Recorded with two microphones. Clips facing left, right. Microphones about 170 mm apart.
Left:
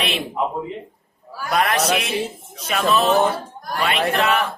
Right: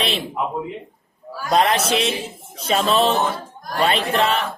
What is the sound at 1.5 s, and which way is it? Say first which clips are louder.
A man's voice: right 2 dB; 25° right (ahead or behind).